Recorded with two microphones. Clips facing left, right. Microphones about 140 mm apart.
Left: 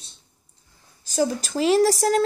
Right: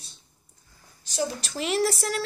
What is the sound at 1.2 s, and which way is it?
Speech, 35° left (ahead or behind).